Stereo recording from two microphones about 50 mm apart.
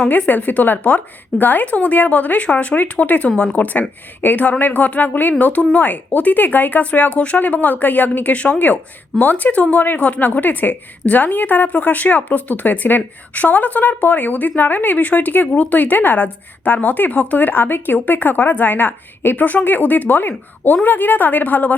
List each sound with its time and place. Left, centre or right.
0.3 s speech: left